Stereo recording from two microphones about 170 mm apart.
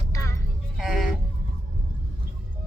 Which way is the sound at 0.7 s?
Centre (ahead or behind).